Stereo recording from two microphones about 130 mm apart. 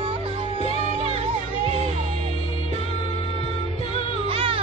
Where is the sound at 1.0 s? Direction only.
50° right (ahead or behind).